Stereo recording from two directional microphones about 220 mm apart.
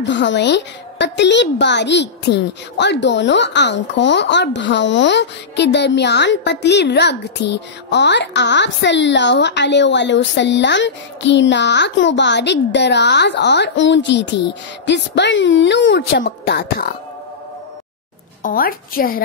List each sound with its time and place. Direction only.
0.0 s speech: 55° left (ahead or behind)
18.4 s a woman's voice: 40° left (ahead or behind)